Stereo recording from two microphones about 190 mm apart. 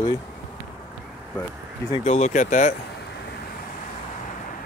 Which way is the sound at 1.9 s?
35° left (ahead or behind).